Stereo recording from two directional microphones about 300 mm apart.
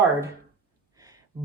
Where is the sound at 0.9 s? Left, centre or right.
Centre.